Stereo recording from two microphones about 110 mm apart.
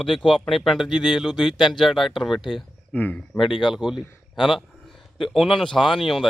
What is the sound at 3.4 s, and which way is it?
Speech, 45° left (ahead or behind).